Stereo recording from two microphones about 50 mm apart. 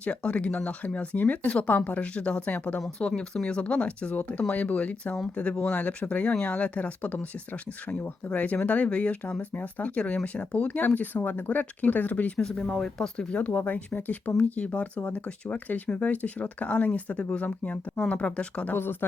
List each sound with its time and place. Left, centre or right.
0.0 s speech: left
2.5 s speech: left
3.2 s speech: left
12.4 s speech: centre
13.3 s speech: left
18.7 s speech: left